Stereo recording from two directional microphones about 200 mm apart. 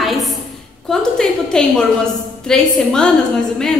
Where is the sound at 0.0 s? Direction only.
Centre (ahead or behind).